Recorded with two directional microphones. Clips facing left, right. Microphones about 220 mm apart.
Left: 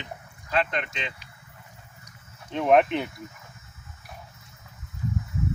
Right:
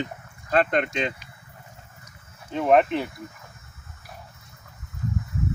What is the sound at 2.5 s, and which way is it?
Speech, centre (ahead or behind).